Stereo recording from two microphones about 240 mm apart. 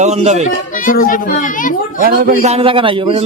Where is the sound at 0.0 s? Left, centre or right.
Right.